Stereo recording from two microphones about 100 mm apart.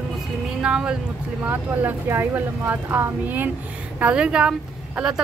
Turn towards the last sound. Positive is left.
turn(degrees=-5)  # may be behind; listen again after turning